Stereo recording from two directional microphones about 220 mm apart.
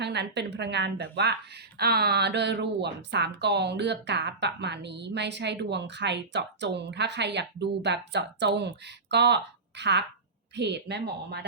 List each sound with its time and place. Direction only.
0.0 s a woman's voice: 50° right (ahead or behind)